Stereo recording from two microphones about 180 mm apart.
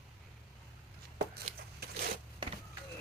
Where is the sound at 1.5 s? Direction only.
35° right (ahead or behind).